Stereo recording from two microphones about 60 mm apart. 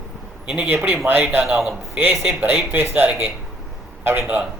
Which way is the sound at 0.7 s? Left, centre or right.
Right.